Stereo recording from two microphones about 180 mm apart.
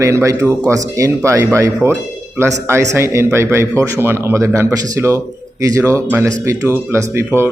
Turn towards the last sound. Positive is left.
turn(degrees=-15)  # may be behind; listen again after turning